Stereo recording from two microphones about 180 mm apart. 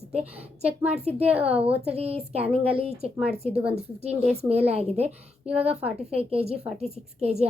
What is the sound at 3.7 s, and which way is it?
A woman's voice, 35° right (ahead or behind).